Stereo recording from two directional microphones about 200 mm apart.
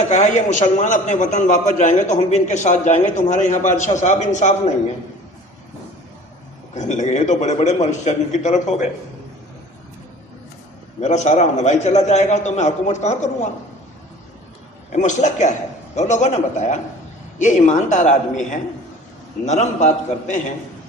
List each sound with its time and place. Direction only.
0.1 s a man's voice: 35° left (ahead or behind)
6.7 s a man's voice: 35° left (ahead or behind)
11.0 s a man's voice: 35° left (ahead or behind)
14.9 s a man's voice: 35° left (ahead or behind)